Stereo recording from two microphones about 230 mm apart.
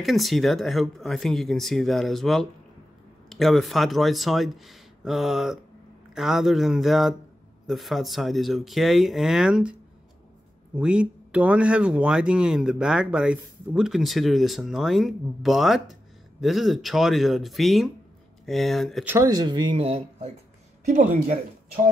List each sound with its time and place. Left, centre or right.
0.0 s speech: centre
19.1 s speech: centre; by 21.4 s right